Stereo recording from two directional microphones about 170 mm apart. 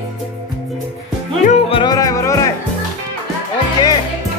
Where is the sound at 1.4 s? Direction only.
35° left (ahead or behind); by 2.5 s 20° left (ahead or behind).